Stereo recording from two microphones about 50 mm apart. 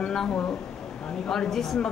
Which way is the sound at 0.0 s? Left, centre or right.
Centre.